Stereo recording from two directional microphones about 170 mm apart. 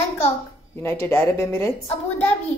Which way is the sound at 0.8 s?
15° left (ahead or behind).